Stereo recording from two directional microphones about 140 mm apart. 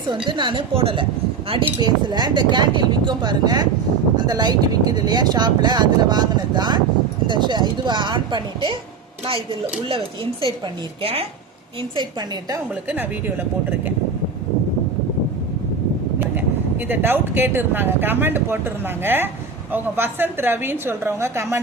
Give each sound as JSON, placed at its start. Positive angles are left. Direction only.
{"t": 0.3, "sound": "speech", "side_deg": -35}
{"t": 11.0, "sound": "speech", "side_deg": -45}
{"t": 11.8, "sound": "speech", "side_deg": -30}
{"t": 12.9, "sound": "speech", "side_deg": -15}
{"t": 16.3, "sound": "speech", "side_deg": -15}